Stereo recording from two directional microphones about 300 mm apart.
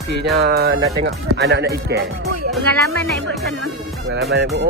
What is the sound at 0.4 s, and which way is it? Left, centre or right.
Speech, right.